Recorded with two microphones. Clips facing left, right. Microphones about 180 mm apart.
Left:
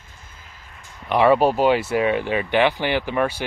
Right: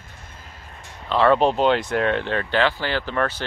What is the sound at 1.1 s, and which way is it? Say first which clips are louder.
Speech: left 1 dB; 10° left (ahead or behind).